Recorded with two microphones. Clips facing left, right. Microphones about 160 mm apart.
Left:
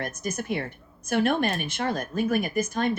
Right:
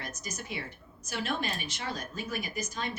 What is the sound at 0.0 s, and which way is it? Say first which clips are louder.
Speech: left 10 dB; 55° left (ahead or behind).